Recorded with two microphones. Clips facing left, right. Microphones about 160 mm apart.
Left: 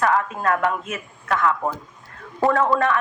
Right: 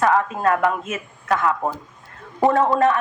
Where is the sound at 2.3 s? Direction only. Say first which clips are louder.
Right 2 dB; 20° right (ahead or behind).